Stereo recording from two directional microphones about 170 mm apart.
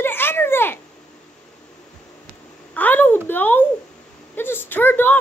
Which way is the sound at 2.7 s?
10° left (ahead or behind).